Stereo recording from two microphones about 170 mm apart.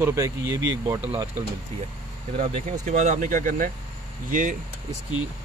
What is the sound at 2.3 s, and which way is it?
Speech, 35° right (ahead or behind).